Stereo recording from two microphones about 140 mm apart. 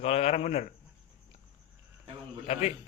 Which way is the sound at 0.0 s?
50° left (ahead or behind).